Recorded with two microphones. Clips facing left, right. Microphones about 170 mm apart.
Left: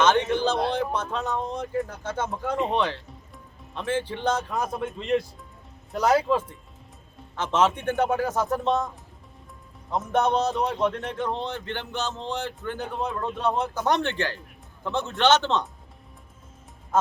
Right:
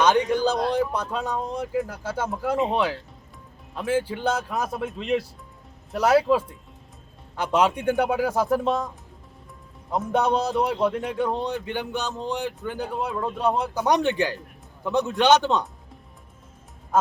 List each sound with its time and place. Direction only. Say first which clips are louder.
0.0 s a sound: right 1 dB; 10° right (ahead or behind)
0.7 s speech: right 2 dB; 10° right (ahead or behind)
9.9 s speech: right 1 dB; 10° right (ahead or behind)